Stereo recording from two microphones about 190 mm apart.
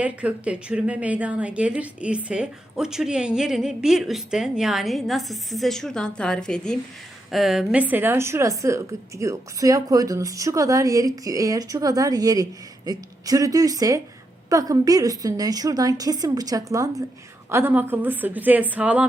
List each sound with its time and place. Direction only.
0.0 s a woman's voice: 5° right (ahead or behind)